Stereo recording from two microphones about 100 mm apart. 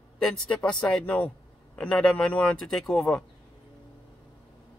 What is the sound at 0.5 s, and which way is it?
Speech, 10° left (ahead or behind).